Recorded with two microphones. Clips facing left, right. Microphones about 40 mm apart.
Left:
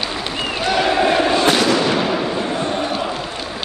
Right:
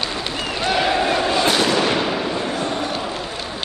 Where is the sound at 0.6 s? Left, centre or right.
Centre.